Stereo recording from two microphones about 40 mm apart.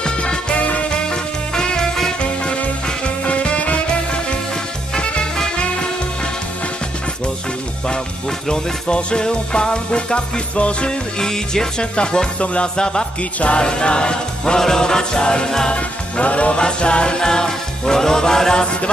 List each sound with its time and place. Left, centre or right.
0.0 s music: left
0.6 s music: left
1.5 s music: centre
3.3 s music: left
8.5 s music: centre
11.1 s music: centre
15.7 s music: left